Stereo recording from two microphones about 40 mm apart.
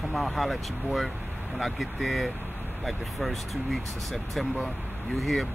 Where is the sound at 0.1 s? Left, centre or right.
Centre.